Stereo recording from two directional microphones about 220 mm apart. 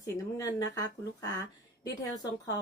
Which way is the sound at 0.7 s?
15° left (ahead or behind).